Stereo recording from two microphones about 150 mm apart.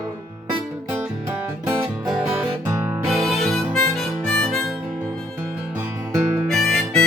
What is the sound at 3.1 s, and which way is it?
Harmonica, centre (ahead or behind).